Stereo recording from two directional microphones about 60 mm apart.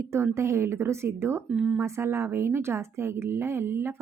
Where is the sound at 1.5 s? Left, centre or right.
Centre.